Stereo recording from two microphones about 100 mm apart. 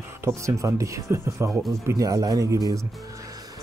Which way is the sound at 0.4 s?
30° right (ahead or behind).